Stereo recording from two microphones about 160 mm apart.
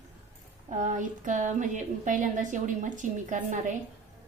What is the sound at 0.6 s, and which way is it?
Speech, 50° right (ahead or behind).